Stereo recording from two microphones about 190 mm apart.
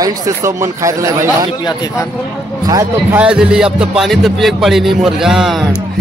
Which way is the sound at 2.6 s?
15° right (ahead or behind).